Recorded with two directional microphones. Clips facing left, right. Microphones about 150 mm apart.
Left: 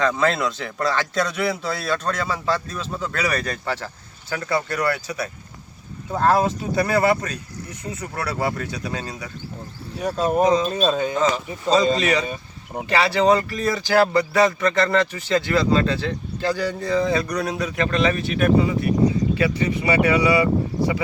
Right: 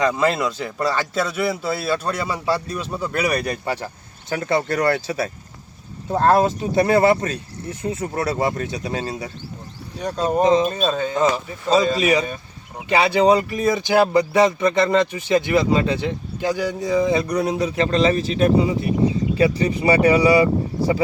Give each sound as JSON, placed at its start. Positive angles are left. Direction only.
{"t": 0.0, "sound": "speech", "side_deg": -10}
{"t": 4.3, "sound": "speech", "side_deg": -25}
{"t": 10.0, "sound": "speech", "side_deg": 5}
{"t": 10.4, "sound": "speech", "side_deg": -25}
{"t": 10.8, "sound": "speech", "side_deg": 15}
{"t": 11.9, "sound": "speech", "side_deg": -10}
{"t": 17.7, "sound": "speech", "side_deg": -30}